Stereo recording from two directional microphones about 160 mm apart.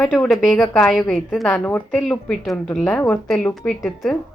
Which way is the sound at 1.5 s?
10° left (ahead or behind).